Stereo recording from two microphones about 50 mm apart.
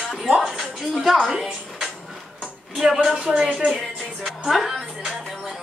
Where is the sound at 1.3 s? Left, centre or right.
Centre.